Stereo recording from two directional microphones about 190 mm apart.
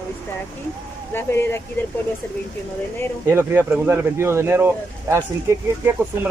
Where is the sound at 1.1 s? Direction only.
10° left (ahead or behind).